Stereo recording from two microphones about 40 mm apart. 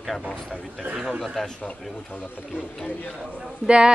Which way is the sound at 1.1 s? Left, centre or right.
Centre.